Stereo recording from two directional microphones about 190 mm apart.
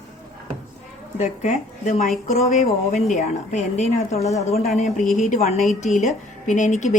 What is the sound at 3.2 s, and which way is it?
Speech, 40° left (ahead or behind).